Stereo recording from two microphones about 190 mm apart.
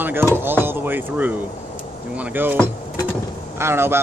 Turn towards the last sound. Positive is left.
turn(degrees=-10)  # may be behind; listen again after turning